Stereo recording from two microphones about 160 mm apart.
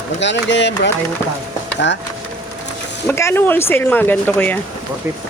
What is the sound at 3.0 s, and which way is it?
Speech, 15° left (ahead or behind).